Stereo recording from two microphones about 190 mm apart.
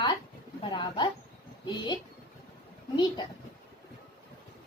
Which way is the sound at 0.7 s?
25° left (ahead or behind).